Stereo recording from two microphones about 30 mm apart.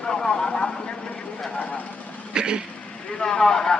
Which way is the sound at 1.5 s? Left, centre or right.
Left.